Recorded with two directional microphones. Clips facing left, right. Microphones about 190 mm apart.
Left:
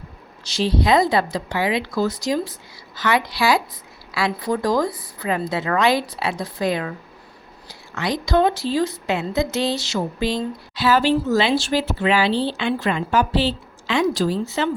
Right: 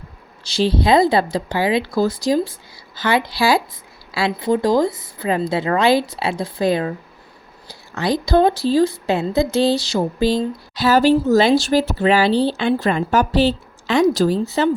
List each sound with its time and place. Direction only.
0.4 s a woman's voice: 30° right (ahead or behind)